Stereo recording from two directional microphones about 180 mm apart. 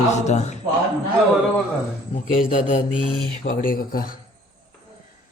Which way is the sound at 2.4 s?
50° left (ahead or behind).